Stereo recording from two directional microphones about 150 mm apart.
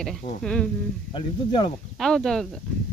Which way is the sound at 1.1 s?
30° left (ahead or behind).